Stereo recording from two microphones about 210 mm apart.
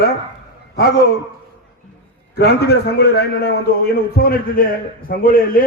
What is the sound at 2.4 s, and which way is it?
A man's voice, 50° left (ahead or behind).